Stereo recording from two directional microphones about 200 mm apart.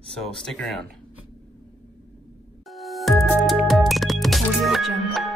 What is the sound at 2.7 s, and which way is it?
Music, centre (ahead or behind).